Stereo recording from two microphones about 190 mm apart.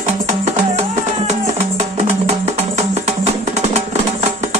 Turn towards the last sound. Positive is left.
turn(degrees=-35)  # may be behind; listen again after turning